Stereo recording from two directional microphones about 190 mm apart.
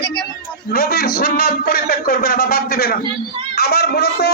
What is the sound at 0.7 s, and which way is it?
A man's voice, 50° left (ahead or behind).